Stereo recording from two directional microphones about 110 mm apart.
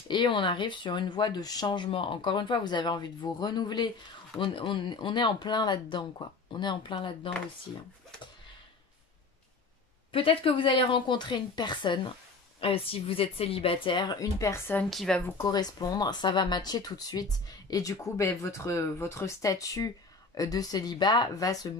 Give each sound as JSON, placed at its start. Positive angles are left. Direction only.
{"t": 0.1, "sound": "speech", "side_deg": 45}
{"t": 1.9, "sound": "speech", "side_deg": 55}
{"t": 10.1, "sound": "speech", "side_deg": 55}
{"t": 12.5, "sound": "speech", "side_deg": 55}
{"t": 14.4, "sound": "speech", "side_deg": 25}
{"t": 14.9, "sound": "speech", "side_deg": 0}
{"t": 15.1, "sound": "speech", "side_deg": 20}
{"t": 15.4, "sound": "speech", "side_deg": 35}